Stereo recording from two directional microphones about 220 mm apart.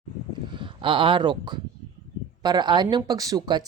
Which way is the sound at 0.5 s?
20° right (ahead or behind).